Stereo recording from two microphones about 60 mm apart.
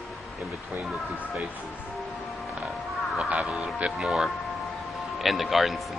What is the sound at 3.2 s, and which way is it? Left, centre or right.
Speech, centre.